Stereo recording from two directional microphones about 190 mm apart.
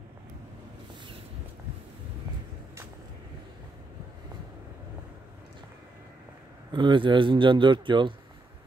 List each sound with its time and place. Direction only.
6.7 s a man's voice: 25° right (ahead or behind)